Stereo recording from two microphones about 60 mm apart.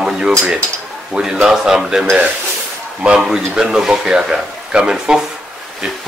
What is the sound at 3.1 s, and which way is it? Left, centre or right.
Speech, centre.